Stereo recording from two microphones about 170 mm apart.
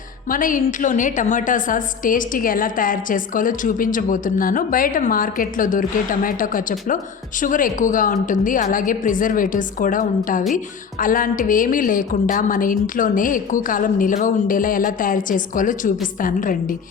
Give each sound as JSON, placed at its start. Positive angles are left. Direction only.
{"t": 0.3, "sound": "a woman's voice", "side_deg": 50}